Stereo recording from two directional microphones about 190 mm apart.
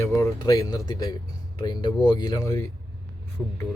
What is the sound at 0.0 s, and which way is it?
Speech, 15° left (ahead or behind).